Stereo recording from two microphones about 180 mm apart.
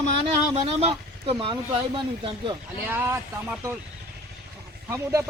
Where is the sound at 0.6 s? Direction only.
35° right (ahead or behind).